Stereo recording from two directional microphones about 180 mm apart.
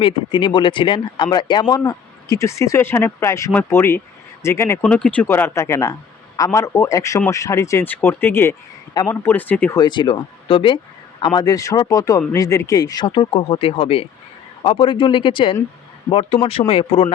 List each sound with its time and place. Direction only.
0.0 s speech: 25° left (ahead or behind); by 9.7 s 10° left (ahead or behind)
9.7 s speech: 25° left (ahead or behind)